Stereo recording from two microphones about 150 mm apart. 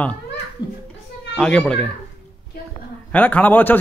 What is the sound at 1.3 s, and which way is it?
Speech, 5° left (ahead or behind).